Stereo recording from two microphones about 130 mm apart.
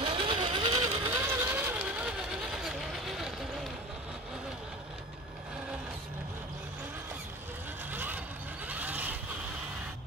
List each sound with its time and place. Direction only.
0.0 s vehicle: 40° right (ahead or behind)
1.2 s vehicle: 20° right (ahead or behind); by 3.3 s centre (ahead or behind)
7.9 s vehicle: 15° right (ahead or behind)